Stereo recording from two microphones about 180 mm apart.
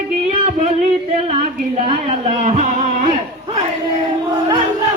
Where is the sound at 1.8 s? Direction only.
40° right (ahead or behind).